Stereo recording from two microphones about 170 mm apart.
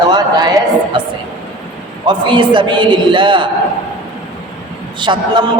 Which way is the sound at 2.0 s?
30° right (ahead or behind).